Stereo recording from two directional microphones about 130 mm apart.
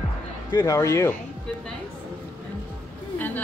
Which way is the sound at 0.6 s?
20° left (ahead or behind).